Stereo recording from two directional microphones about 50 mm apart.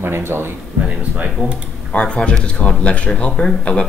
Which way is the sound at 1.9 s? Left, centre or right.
Left.